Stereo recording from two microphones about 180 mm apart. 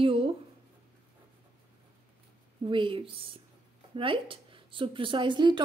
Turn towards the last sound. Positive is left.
turn(degrees=-25)  # may be behind; listen again after turning